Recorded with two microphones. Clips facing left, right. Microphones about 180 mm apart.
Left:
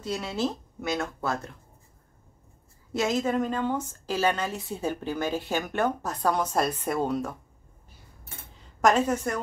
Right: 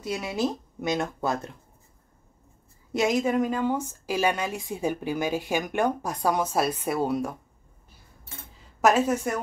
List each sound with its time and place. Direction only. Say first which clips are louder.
0.0 s a woman's voice: right 1 dB; 10° right (ahead or behind)
2.9 s a woman's voice: right 2 dB; 15° right (ahead or behind)
8.5 s a woman's voice: right 1 dB; 5° right (ahead or behind)